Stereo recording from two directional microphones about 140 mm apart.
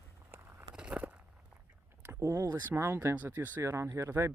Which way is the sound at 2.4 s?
20° right (ahead or behind).